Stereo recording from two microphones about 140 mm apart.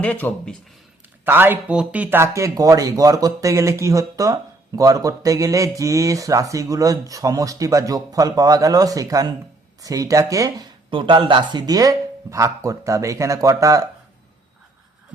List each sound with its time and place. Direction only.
0.0 s speech: 10° left (ahead or behind)
1.2 s speech: 15° right (ahead or behind)
10.9 s speech: 35° right (ahead or behind)